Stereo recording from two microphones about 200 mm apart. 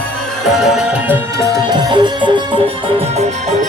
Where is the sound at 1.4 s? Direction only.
20° right (ahead or behind).